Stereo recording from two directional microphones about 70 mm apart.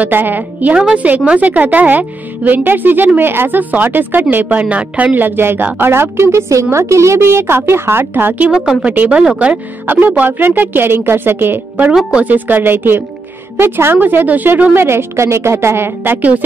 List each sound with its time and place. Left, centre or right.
0.0 s speech: right
0.7 s a woman's voice: centre; by 8.5 s right
8.5 s a woman's voice: centre
8.9 s a woman's voice: right
9.8 s a woman's voice: right